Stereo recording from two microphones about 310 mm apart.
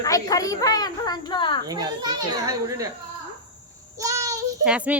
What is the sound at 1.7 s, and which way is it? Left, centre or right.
A child's voice, centre.